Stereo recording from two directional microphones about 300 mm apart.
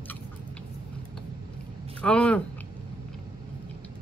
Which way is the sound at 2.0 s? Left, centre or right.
Centre.